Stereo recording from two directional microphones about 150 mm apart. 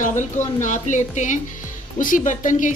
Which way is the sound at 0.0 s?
55° left (ahead or behind).